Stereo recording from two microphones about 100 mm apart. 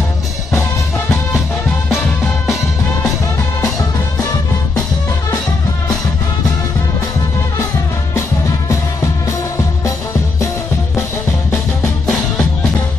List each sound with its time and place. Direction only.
8.1 s music: 30° left (ahead or behind)
11.5 s music: 30° left (ahead or behind)